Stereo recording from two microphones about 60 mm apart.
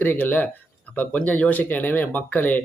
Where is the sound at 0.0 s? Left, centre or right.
Left.